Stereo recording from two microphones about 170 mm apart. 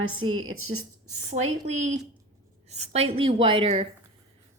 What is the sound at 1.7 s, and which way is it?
Speech, 45° right (ahead or behind).